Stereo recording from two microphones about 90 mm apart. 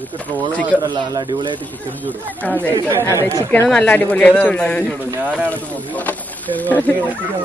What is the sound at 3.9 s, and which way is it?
Speech, 15° left (ahead or behind).